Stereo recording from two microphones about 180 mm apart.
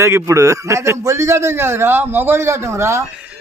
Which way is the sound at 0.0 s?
15° right (ahead or behind).